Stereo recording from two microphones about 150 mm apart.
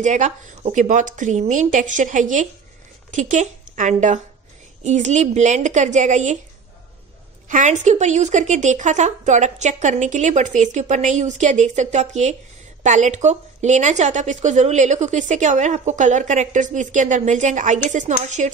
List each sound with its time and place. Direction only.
0.0 s a woman's voice: 55° right (ahead or behind)
7.4 s a woman's voice: 55° right (ahead or behind)